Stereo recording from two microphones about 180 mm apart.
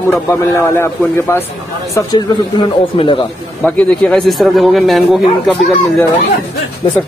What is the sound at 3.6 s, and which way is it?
A man's voice, 5° left (ahead or behind).